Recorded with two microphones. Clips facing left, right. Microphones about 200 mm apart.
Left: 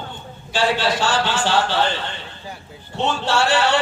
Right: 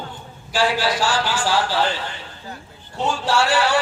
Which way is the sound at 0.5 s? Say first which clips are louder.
Even; 25° left (ahead or behind).